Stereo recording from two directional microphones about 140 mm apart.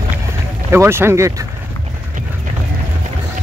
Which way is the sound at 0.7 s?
15° right (ahead or behind).